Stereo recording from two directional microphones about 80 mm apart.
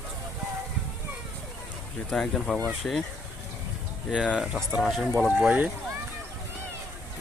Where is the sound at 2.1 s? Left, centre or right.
Centre.